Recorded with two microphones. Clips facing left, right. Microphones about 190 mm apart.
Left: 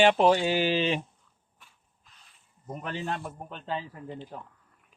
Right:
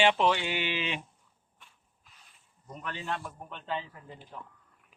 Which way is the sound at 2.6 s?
50° left (ahead or behind).